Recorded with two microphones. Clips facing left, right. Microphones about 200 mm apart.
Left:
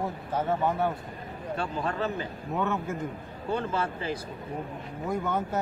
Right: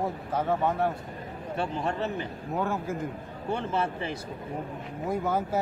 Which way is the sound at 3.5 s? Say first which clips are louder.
Even; 25° right (ahead or behind).